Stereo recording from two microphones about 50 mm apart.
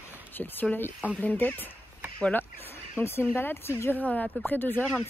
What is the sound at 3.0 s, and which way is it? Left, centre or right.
Speech, left.